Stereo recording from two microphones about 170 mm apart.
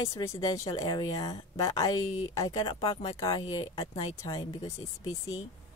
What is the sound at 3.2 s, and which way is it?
Speech, 20° left (ahead or behind).